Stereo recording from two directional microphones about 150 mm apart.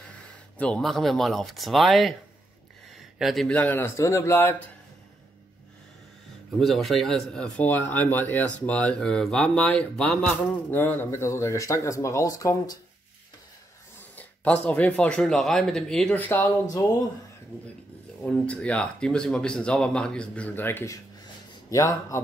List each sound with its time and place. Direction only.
0.6 s speech: 5° left (ahead or behind)
6.6 s speech: centre (ahead or behind); by 12.7 s 20° left (ahead or behind)
14.1 s speech: 10° left (ahead or behind)
18.2 s speech: 5° left (ahead or behind)